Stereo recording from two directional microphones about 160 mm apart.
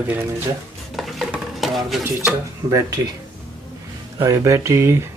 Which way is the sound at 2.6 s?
20° right (ahead or behind).